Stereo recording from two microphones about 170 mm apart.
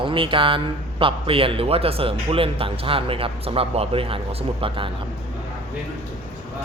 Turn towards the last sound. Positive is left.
turn(degrees=-30)  # may be behind; listen again after turning